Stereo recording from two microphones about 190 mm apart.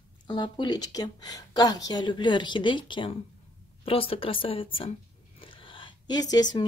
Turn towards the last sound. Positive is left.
turn(degrees=20)  # may be behind; listen again after turning